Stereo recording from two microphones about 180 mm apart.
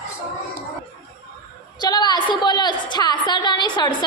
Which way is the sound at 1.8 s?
25° left (ahead or behind).